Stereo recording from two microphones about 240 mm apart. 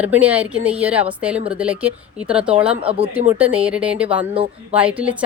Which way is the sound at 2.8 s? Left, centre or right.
Right.